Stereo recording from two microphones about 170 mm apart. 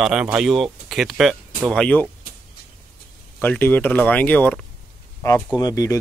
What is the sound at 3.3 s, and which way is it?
Speech, 10° left (ahead or behind).